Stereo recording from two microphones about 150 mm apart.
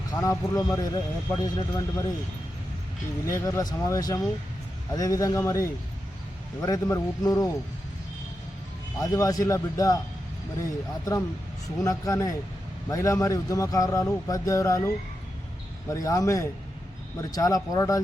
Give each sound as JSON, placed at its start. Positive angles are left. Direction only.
{"t": 0.2, "sound": "speech", "side_deg": 20}
{"t": 3.2, "sound": "speech", "side_deg": 20}
{"t": 9.0, "sound": "speech", "side_deg": 25}
{"t": 11.8, "sound": "speech", "side_deg": 20}